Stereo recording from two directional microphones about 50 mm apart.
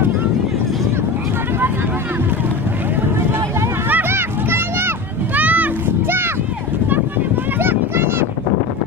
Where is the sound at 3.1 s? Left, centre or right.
Right.